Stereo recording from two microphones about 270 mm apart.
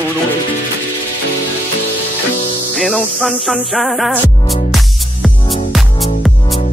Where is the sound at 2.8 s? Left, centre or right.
Centre.